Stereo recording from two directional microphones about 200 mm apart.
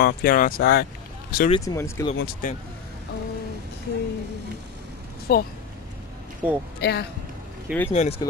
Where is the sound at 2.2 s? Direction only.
45° left (ahead or behind).